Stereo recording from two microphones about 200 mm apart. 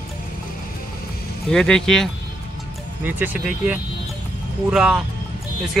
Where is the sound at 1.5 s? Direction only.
5° left (ahead or behind).